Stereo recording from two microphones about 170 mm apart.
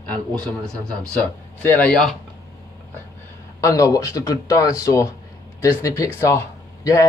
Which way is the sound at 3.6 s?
20° left (ahead or behind).